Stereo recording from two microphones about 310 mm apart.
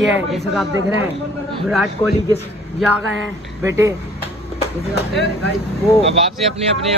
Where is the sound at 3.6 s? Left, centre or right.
Centre.